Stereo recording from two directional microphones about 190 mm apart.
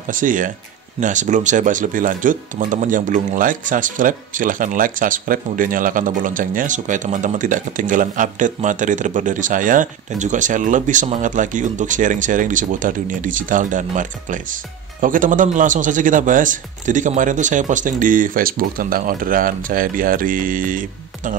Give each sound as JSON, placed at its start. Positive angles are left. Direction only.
{"t": 0.1, "sound": "speech", "side_deg": -45}